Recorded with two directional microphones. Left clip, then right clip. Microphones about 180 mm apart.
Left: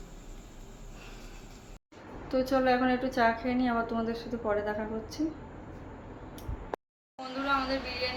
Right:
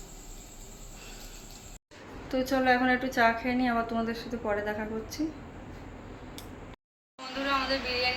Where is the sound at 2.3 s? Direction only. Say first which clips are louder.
Right 1 dB; centre (ahead or behind).